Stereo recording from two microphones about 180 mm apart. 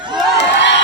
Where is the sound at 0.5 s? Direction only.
80° left.